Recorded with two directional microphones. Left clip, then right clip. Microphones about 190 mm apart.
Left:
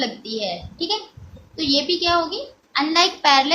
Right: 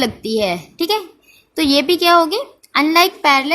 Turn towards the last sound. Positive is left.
turn(degrees=-35)  # may be behind; listen again after turning